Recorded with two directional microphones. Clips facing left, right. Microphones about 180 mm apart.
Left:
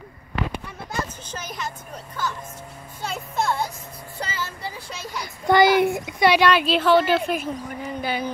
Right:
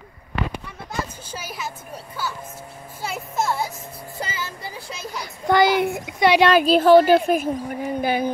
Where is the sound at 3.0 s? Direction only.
5° right (ahead or behind).